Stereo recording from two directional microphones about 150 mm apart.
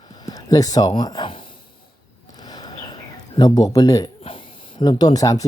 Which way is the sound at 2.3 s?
25° left (ahead or behind).